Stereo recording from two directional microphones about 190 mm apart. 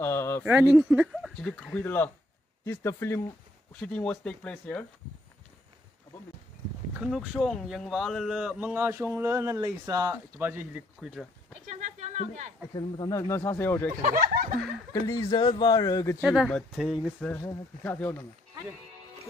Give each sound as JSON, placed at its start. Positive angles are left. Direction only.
{"t": 0.0, "sound": "a sound", "side_deg": 10}
{"t": 0.4, "sound": "speech", "side_deg": -10}
{"t": 6.9, "sound": "speech", "side_deg": -5}
{"t": 11.7, "sound": "a sound", "side_deg": -40}
{"t": 12.7, "sound": "speech", "side_deg": 25}
{"t": 14.0, "sound": "speech", "side_deg": -50}
{"t": 14.9, "sound": "speech", "side_deg": 20}
{"t": 16.2, "sound": "speech", "side_deg": 0}
{"t": 17.3, "sound": "speech", "side_deg": 15}